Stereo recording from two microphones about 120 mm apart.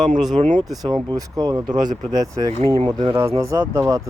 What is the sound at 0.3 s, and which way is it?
Speech, 90° right.